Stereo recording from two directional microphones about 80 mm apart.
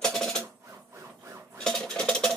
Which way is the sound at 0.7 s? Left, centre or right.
Right.